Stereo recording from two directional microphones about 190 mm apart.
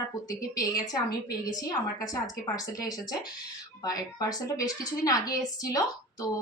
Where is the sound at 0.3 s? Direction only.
20° left (ahead or behind).